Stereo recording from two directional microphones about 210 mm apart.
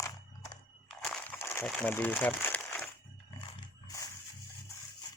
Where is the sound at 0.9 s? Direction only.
5° left (ahead or behind).